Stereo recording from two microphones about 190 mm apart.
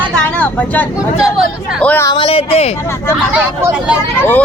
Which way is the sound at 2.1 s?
30° left (ahead or behind).